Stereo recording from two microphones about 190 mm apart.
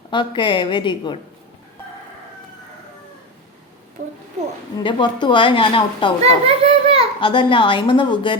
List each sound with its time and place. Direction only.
0.1 s a woman's voice: 25° left (ahead or behind)
4.8 s a woman's voice: 25° left (ahead or behind)
6.4 s a child's voice: 30° right (ahead or behind)
7.2 s a woman's voice: 25° left (ahead or behind)